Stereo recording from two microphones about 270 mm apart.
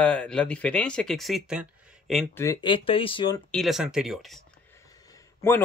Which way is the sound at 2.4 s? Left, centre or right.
Centre.